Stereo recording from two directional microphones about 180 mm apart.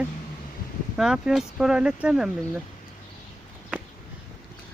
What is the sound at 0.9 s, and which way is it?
Speech, 5° right (ahead or behind).